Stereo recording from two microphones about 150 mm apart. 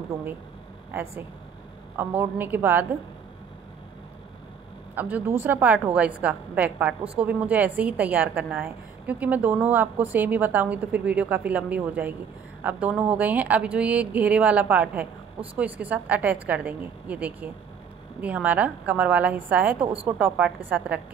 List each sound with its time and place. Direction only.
0.1 s a woman's voice: 20° right (ahead or behind)
2.0 s a woman's voice: 15° right (ahead or behind)
4.9 s a woman's voice: 10° right (ahead or behind)